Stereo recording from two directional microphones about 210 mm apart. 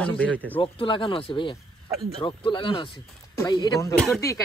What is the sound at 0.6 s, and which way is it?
Speech, 25° left (ahead or behind).